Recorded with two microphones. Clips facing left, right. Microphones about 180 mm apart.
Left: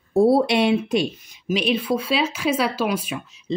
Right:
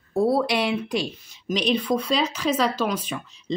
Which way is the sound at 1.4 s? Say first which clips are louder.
Left 1 dB; 5° left (ahead or behind).